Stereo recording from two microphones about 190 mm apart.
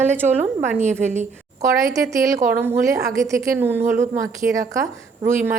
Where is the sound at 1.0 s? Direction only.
40° right (ahead or behind).